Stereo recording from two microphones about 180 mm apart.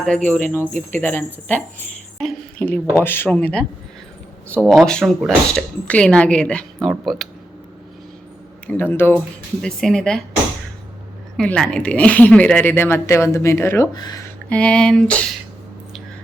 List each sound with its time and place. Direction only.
0.3 s a woman's voice: 10° left (ahead or behind)
0.7 s speech: 40° right (ahead or behind)
1.0 s a woman's voice: 10° left (ahead or behind)
8.6 s a woman's voice: 10° left (ahead or behind)
11.3 s a woman's voice: 5° left (ahead or behind); by 14.2 s 20° left (ahead or behind)
14.5 s a woman's voice: 5° left (ahead or behind)